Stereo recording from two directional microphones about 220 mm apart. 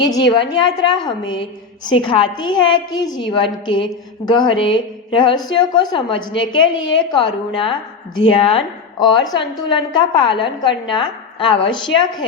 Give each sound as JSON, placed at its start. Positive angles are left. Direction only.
{"t": 0.0, "sound": "a woman's voice", "side_deg": 20}